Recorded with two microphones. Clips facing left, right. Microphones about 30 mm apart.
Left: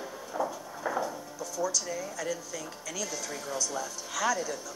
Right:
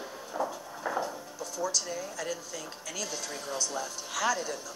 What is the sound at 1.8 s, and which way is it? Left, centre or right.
Speech, centre.